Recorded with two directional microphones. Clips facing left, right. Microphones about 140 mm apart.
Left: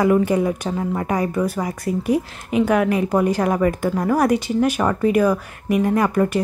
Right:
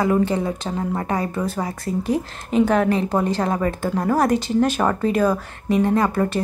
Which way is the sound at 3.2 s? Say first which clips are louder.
Left 3 dB; 10° left (ahead or behind).